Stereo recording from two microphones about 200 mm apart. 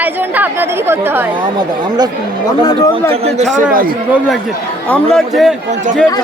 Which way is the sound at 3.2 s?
35° right (ahead or behind).